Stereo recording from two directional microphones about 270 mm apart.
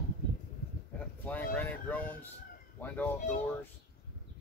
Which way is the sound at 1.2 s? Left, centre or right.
Centre.